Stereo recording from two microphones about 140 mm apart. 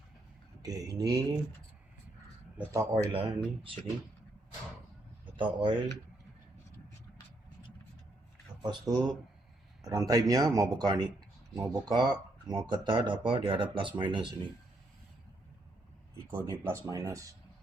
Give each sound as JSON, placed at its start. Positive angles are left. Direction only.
{"t": 0.6, "sound": "speech", "side_deg": -25}
{"t": 2.6, "sound": "speech", "side_deg": -20}
{"t": 3.1, "sound": "speech", "side_deg": -40}
{"t": 5.4, "sound": "speech", "side_deg": -35}
{"t": 8.9, "sound": "speech", "side_deg": -30}
{"t": 16.3, "sound": "speech", "side_deg": -20}